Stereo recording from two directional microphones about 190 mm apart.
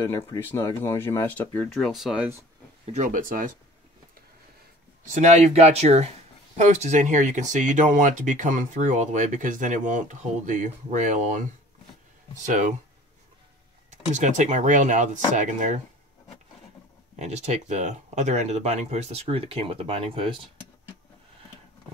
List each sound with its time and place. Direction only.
0.0 s speech: 15° left (ahead or behind); by 2.2 s centre (ahead or behind)
2.8 s speech: 40° right (ahead or behind)
5.1 s speech: 35° right (ahead or behind)
12.4 s speech: 40° right (ahead or behind)
13.8 s speech: 40° right (ahead or behind)
17.2 s speech: 35° right (ahead or behind)